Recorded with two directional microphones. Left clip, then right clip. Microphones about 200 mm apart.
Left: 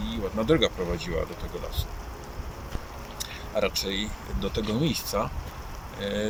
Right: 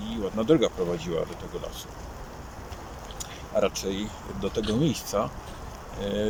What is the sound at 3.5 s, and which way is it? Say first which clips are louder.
Speech: right 1 dB; 10° right (ahead or behind).